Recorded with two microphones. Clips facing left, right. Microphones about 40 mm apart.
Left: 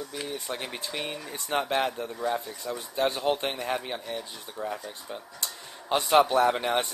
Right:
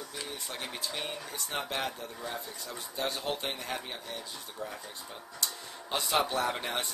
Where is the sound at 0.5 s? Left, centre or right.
Centre.